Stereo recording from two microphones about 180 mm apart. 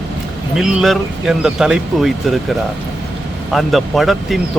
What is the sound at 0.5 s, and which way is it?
Speech, centre (ahead or behind).